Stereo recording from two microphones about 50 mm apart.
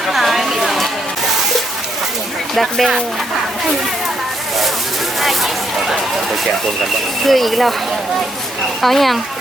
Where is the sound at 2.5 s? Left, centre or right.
Centre.